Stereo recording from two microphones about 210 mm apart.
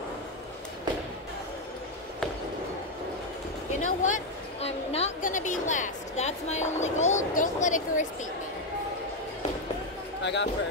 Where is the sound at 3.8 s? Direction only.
35° left (ahead or behind).